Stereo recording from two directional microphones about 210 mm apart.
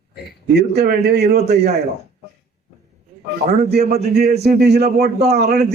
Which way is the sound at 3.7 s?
50° right (ahead or behind).